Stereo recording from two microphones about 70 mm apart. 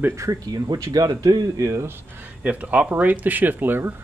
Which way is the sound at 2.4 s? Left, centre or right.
Right.